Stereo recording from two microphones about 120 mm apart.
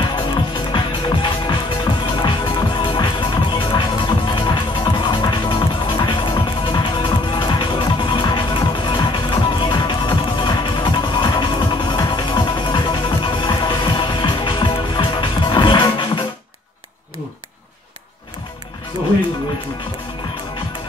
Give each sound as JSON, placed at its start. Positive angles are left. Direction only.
{"t": 0.1, "sound": "music", "side_deg": 40}